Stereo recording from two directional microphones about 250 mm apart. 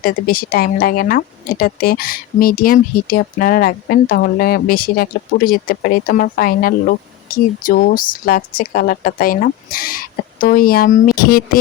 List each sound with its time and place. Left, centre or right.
0.0 s speech: left